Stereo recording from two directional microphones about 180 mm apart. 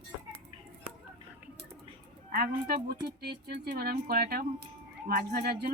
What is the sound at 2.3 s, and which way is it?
Speech, 55° right (ahead or behind).